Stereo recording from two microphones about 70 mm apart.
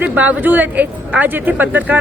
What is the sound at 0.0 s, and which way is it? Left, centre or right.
Speech, right.